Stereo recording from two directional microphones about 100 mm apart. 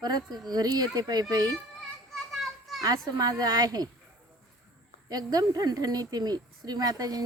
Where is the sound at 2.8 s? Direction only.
35° right (ahead or behind).